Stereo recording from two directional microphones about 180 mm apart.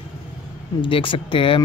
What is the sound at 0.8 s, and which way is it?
Speech, 30° left (ahead or behind).